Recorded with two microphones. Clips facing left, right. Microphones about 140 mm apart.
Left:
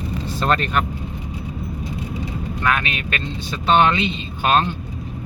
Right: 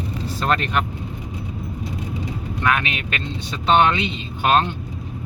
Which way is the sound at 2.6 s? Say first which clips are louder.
Right 1 dB; 15° right (ahead or behind).